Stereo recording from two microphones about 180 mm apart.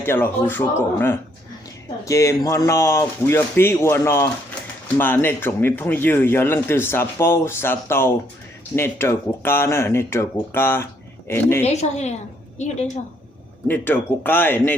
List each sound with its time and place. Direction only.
0.0 s speech: 10° left (ahead or behind)
11.6 s a woman's voice: 40° left (ahead or behind)
13.7 s speech: 10° left (ahead or behind)